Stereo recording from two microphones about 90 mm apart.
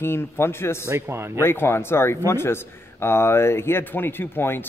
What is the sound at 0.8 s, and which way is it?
Speech, 30° right (ahead or behind).